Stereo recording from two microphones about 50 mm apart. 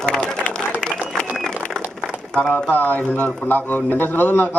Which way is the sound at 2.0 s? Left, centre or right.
Centre.